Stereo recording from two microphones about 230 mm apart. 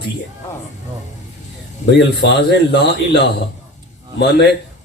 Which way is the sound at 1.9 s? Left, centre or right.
Left.